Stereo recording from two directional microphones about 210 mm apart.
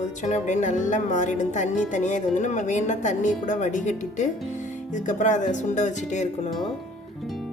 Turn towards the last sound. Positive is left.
turn(degrees=35)  # may be behind; listen again after turning